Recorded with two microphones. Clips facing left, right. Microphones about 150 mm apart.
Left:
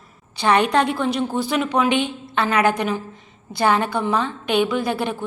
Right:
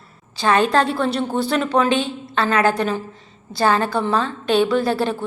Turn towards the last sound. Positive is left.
turn(degrees=15)  # may be behind; listen again after turning